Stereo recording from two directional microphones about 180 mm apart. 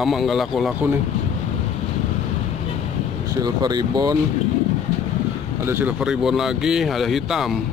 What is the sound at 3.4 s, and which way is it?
Speech, 25° right (ahead or behind).